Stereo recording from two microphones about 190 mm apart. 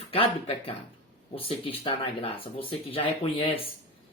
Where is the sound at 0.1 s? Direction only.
30° left (ahead or behind).